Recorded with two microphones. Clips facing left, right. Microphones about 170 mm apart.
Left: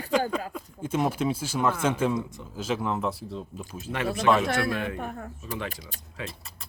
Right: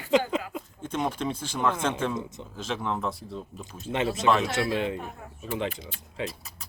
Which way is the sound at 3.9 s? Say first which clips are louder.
Left 1 dB; 25° right (ahead or behind).